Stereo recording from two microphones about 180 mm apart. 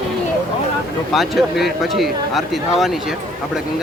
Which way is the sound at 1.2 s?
Centre (ahead or behind).